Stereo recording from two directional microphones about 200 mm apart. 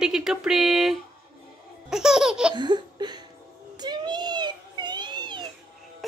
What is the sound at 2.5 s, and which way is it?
Laughter, 20° right (ahead or behind).